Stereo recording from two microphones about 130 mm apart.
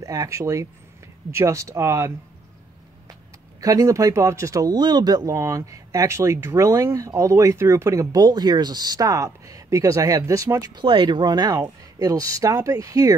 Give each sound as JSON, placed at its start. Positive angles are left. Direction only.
{"t": 0.0, "sound": "speech", "side_deg": -25}
{"t": 3.6, "sound": "speech", "side_deg": -25}